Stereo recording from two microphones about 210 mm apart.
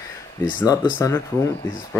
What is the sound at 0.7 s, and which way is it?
Speech, 20° left (ahead or behind).